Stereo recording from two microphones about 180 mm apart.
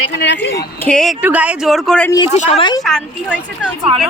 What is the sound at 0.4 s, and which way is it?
Speech, 65° left (ahead or behind).